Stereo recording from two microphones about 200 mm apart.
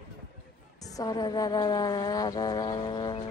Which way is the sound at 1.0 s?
20° left (ahead or behind).